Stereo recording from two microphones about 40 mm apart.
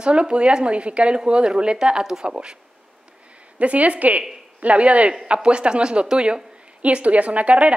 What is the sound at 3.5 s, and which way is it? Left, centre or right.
A woman's voice, right.